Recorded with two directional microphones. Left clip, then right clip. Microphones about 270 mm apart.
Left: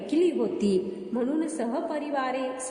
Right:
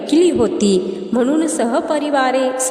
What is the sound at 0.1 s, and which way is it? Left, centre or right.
A woman's voice, right.